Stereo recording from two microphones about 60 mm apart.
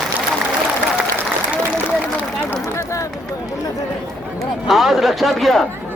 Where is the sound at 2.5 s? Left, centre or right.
Left.